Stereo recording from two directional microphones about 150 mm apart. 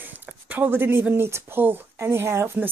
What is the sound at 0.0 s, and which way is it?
Speech, 10° right (ahead or behind).